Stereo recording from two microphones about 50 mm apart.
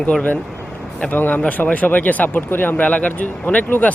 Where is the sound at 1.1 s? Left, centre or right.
Left.